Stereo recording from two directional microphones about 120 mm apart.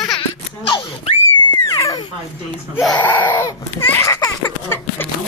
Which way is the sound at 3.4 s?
25° left (ahead or behind).